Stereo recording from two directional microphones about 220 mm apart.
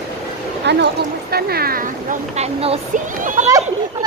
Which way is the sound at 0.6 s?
50° right (ahead or behind).